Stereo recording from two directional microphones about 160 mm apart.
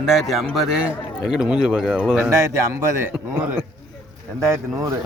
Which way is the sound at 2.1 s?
15° right (ahead or behind).